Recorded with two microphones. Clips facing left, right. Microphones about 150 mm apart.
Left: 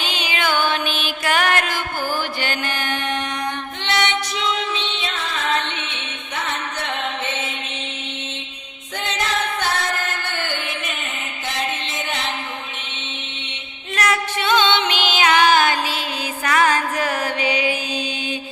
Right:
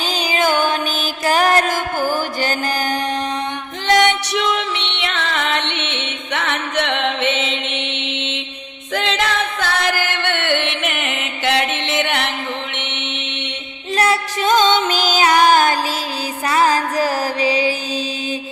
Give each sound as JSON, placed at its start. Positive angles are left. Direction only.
{"t": 0.0, "sound": "music", "side_deg": -40}
{"t": 4.4, "sound": "music", "side_deg": -65}
{"t": 12.7, "sound": "mantra", "side_deg": -70}
{"t": 13.9, "sound": "music", "side_deg": -30}
{"t": 16.5, "sound": "music", "side_deg": -35}